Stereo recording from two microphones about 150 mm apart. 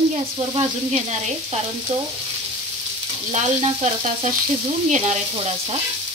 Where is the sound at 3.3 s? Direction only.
50° right (ahead or behind).